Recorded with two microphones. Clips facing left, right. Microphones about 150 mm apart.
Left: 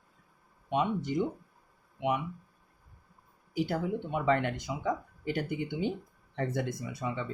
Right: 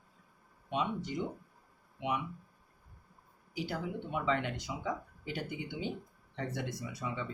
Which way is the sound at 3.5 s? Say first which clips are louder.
Left 7 dB; 50° left (ahead or behind).